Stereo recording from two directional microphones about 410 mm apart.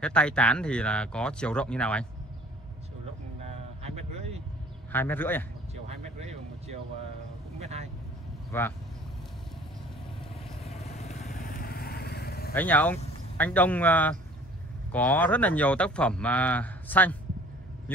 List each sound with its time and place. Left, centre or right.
0.0 s speech: centre
3.4 s a sound: centre
4.9 s speech: centre
6.1 s a sound: centre
7.5 s vehicle: centre
8.5 s speech: centre
10.6 s vehicle: centre
12.5 s speech: centre